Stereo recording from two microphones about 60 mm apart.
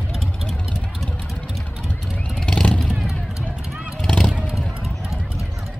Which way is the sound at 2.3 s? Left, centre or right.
Centre.